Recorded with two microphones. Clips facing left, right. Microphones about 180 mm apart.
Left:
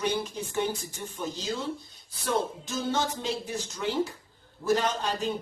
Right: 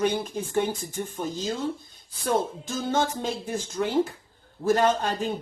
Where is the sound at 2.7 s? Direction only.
50° right (ahead or behind).